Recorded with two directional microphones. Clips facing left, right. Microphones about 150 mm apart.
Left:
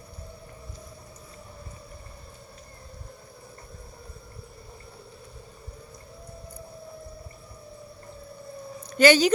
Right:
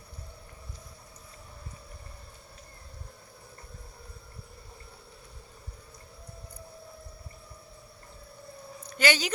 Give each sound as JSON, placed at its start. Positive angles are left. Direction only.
{"t": 9.0, "sound": "speech", "side_deg": 35}